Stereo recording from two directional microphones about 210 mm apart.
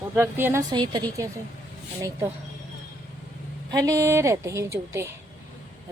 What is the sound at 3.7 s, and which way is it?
A woman's voice, 15° right (ahead or behind).